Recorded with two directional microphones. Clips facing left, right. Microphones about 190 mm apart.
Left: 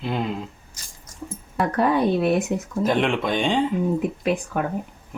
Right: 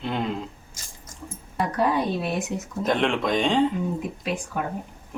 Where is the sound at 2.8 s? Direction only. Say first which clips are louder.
Left 1 dB; 5° left (ahead or behind).